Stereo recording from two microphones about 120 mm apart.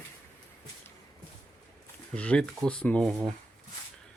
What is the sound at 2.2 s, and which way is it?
Speech, 10° left (ahead or behind).